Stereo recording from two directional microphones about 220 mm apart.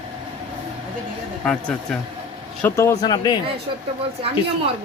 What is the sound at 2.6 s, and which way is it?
Speech, 10° left (ahead or behind).